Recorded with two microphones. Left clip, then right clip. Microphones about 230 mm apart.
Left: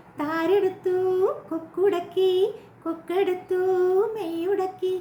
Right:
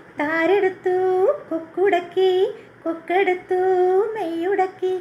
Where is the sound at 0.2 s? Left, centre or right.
Left.